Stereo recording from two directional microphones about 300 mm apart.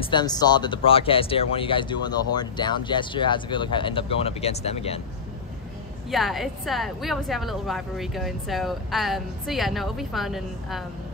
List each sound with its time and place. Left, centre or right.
0.0 s speech: centre
6.0 s a woman's voice: centre